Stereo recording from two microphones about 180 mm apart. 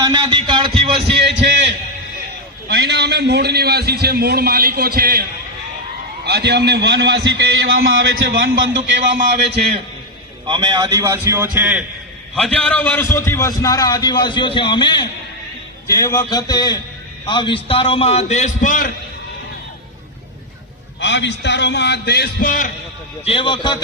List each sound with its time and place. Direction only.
0.0 s a sound: 20° right (ahead or behind)
1.2 s a sound: 75° right (ahead or behind)
2.6 s a man's voice: 65° right (ahead or behind)
6.2 s a man's voice: 65° right (ahead or behind)
10.4 s a man's voice: 25° right (ahead or behind); by 11.9 s 5° right (ahead or behind)
12.4 s a man's voice: 5° left (ahead or behind); by 18.9 s 45° left (ahead or behind)
21.0 s a man's voice: 75° left (ahead or behind); by 22.7 s 50° left (ahead or behind)
23.2 s a man's voice: 30° left (ahead or behind)